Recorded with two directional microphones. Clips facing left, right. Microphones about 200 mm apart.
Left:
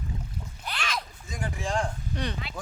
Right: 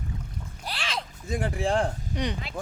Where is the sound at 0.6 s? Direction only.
30° right (ahead or behind).